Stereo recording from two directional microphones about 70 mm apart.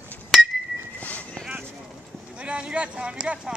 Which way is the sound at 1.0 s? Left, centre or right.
Left.